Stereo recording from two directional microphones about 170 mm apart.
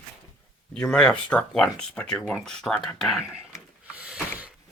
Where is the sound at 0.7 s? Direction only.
5° left (ahead or behind).